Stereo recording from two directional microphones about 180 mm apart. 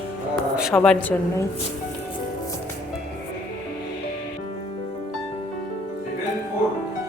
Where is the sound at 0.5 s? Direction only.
Centre (ahead or behind).